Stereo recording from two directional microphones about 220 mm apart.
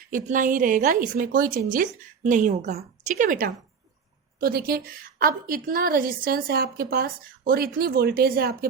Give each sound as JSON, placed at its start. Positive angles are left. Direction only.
{"t": 0.1, "sound": "a woman's voice", "side_deg": -35}